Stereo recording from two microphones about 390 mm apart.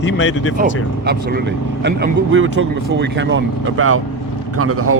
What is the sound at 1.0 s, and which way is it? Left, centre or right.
Speech, right.